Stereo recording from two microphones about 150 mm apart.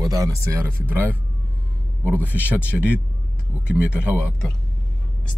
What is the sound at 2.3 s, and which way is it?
Speech, 10° right (ahead or behind).